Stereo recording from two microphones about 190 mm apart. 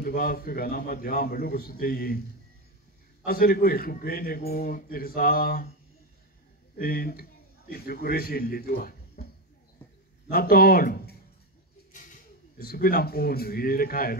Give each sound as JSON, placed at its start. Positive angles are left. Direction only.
{"t": 0.0, "sound": "a man's voice", "side_deg": 50}
{"t": 3.3, "sound": "a man's voice", "side_deg": 50}
{"t": 6.8, "sound": "a man's voice", "side_deg": 50}
{"t": 10.3, "sound": "a man's voice", "side_deg": 50}
{"t": 12.6, "sound": "a man's voice", "side_deg": 50}